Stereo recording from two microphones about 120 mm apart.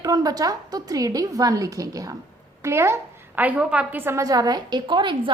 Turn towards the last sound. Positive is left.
turn(degrees=-40)  # may be behind; listen again after turning